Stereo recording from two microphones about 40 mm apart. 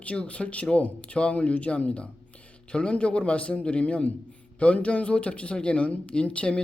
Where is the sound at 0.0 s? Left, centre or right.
Left.